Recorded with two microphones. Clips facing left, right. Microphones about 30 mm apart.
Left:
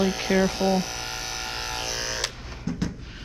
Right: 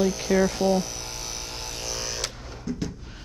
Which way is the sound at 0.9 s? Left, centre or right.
Left.